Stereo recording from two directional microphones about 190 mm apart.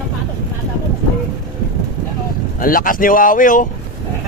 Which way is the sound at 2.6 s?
45° left (ahead or behind).